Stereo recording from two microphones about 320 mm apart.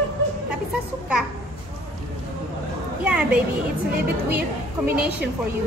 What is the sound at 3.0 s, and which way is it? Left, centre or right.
Speech, centre.